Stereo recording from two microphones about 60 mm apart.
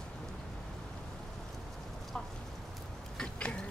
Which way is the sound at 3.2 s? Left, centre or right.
Centre.